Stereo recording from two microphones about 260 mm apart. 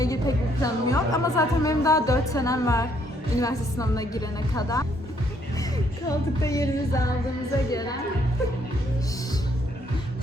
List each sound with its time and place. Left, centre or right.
0.0 s a woman's voice: centre
6.1 s a woman's voice: centre